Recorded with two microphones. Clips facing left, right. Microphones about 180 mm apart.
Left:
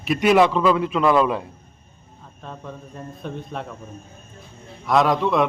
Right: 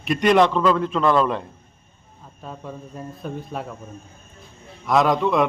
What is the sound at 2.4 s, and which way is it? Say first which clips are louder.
Speech: right 1 dB; 5° right (ahead or behind).